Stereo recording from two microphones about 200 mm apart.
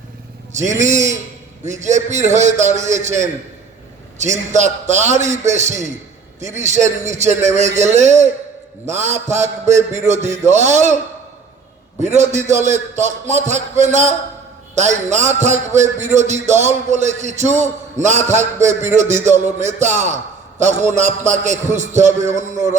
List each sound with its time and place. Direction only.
0.5 s a man's voice: 35° right (ahead or behind)
12.0 s a man's voice: 35° right (ahead or behind)